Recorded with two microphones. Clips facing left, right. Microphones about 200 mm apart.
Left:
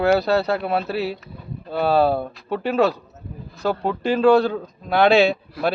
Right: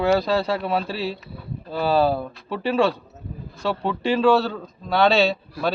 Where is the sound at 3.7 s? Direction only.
40° left (ahead or behind).